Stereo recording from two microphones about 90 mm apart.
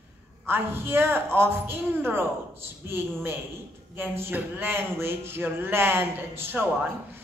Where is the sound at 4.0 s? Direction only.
25° right (ahead or behind).